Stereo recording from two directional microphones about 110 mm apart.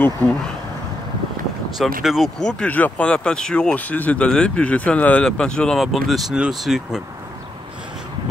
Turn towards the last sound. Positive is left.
turn(degrees=-5)  # may be behind; listen again after turning